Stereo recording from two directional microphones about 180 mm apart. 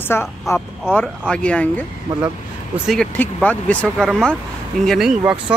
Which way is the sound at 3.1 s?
10° left (ahead or behind).